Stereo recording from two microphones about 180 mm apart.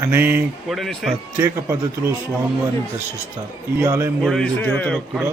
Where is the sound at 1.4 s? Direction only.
15° right (ahead or behind).